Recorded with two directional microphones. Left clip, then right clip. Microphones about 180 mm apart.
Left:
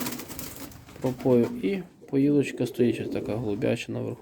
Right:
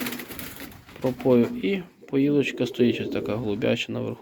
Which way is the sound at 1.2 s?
10° left (ahead or behind).